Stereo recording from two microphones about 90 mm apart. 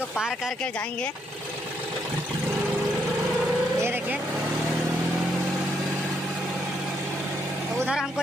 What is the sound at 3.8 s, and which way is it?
Vehicle, 25° right (ahead or behind).